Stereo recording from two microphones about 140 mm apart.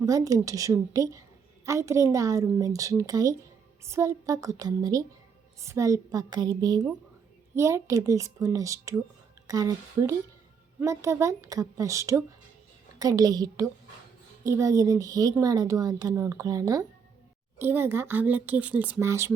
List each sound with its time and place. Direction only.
0.0 s a woman's voice: 25° right (ahead or behind)